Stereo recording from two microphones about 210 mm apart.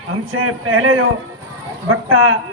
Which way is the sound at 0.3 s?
75° right (ahead or behind).